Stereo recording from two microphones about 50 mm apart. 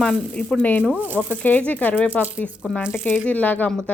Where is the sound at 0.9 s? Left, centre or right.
Right.